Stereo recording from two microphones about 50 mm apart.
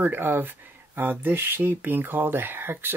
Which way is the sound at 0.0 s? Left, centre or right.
Right.